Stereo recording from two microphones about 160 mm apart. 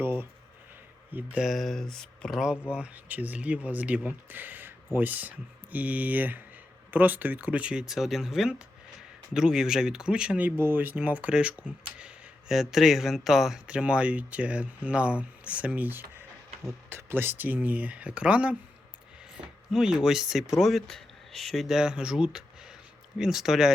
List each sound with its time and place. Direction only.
0.0 s speech: 15° right (ahead or behind)
19.4 s a sound: 5° right (ahead or behind)
19.7 s speech: 5° right (ahead or behind)